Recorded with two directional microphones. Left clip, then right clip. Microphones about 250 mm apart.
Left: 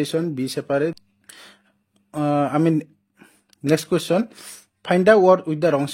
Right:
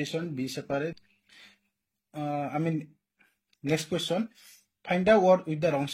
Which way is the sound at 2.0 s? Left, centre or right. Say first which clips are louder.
Left 12 dB; left.